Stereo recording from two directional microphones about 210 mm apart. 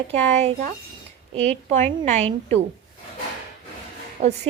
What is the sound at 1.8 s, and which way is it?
Speech, 35° right (ahead or behind).